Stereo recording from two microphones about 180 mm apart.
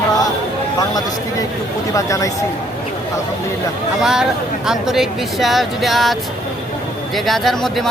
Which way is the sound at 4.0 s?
5° right (ahead or behind).